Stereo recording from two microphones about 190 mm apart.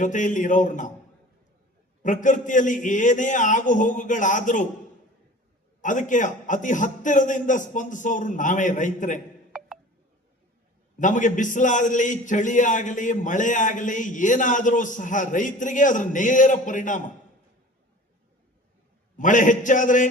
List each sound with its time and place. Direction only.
0.0 s a man's voice: 40° left (ahead or behind)
2.0 s a man's voice: 40° left (ahead or behind)
5.8 s a man's voice: 40° left (ahead or behind)
10.9 s a man's voice: 40° left (ahead or behind)
19.1 s a man's voice: 40° left (ahead or behind)